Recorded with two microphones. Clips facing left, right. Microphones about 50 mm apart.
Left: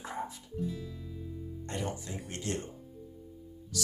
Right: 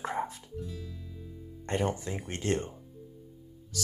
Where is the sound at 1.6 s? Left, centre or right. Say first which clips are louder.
Right 7 dB; right.